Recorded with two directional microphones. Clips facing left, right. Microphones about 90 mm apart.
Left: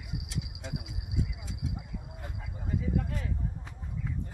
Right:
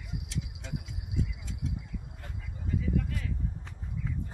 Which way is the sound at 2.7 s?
30° left (ahead or behind).